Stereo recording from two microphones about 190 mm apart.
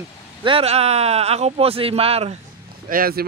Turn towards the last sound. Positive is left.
turn(degrees=-50)  # may be behind; listen again after turning